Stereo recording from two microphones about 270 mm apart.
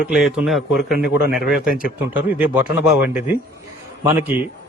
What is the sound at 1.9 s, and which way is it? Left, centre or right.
A man's voice, centre.